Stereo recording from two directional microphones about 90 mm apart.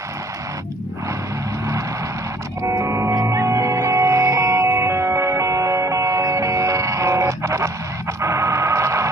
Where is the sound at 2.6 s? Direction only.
35° right (ahead or behind).